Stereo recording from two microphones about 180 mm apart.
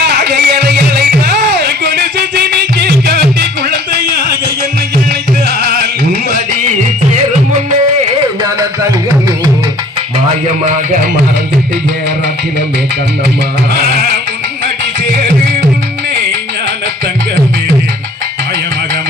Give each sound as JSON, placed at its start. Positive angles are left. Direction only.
{"t": 0.0, "sound": "music", "side_deg": -65}
{"t": 5.5, "sound": "music", "side_deg": -60}